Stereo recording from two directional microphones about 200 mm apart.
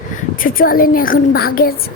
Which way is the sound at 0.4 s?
45° left (ahead or behind).